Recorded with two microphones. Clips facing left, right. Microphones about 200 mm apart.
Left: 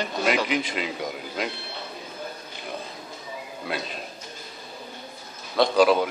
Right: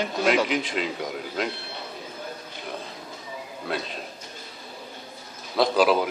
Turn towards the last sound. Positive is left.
turn(degrees=-5)  # may be behind; listen again after turning